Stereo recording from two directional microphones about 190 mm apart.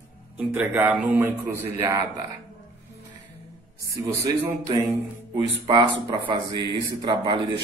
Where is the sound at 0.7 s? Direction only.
10° right (ahead or behind).